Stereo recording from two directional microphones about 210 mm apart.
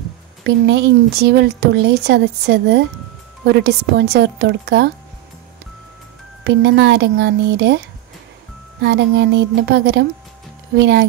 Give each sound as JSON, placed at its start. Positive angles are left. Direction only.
{"t": 0.4, "sound": "speech", "side_deg": -55}
{"t": 6.4, "sound": "speech", "side_deg": -55}
{"t": 8.8, "sound": "speech", "side_deg": -55}